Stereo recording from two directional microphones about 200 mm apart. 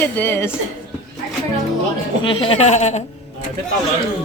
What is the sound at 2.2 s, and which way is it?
Speech, 25° left (ahead or behind).